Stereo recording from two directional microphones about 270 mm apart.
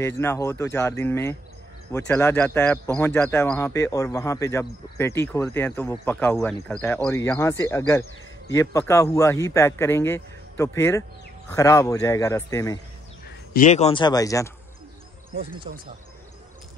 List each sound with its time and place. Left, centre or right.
0.0 s speech: centre
13.5 s speech: left; by 14.5 s centre
15.3 s speech: centre